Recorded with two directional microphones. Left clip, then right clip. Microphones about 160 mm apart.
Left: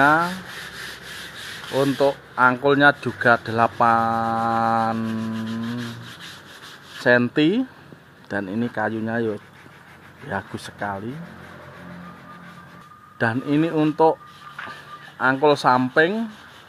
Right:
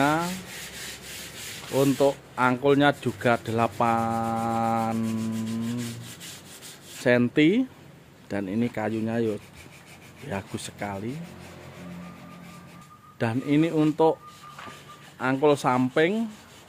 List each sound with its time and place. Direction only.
0.0 s speech: 5° right (ahead or behind)
1.8 s speech: 20° right (ahead or behind); by 5.3 s 5° right (ahead or behind)
7.0 s speech: 15° right (ahead or behind)
13.2 s speech: 10° right (ahead or behind)
15.1 s speech: 10° right (ahead or behind)